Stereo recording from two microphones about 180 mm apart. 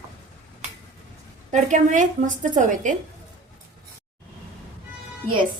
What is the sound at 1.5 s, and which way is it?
A woman's voice, 40° right (ahead or behind).